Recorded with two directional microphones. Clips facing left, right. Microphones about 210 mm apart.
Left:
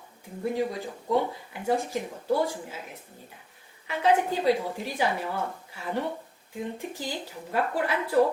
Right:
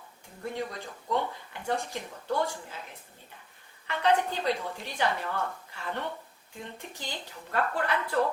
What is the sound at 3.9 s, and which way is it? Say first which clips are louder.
Speech: left 2 dB; 5° left (ahead or behind).